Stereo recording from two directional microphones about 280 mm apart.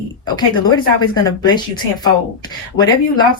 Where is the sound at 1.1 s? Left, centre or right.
Centre.